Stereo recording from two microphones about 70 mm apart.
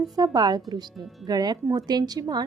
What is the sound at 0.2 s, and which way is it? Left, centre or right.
A woman's voice, right.